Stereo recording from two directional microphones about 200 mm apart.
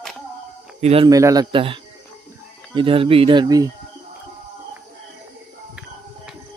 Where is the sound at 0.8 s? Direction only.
30° right (ahead or behind).